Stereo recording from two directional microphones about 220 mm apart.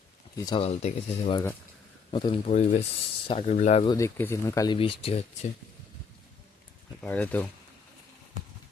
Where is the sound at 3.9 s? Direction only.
10° left (ahead or behind).